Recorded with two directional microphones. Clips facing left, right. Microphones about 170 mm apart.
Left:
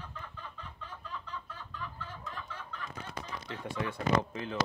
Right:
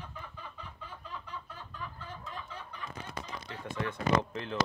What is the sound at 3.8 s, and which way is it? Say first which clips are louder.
Speech: right 1 dB; 10° left (ahead or behind).